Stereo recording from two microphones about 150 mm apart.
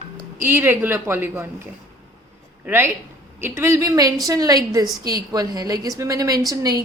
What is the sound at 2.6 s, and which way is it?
A woman's voice, 15° right (ahead or behind).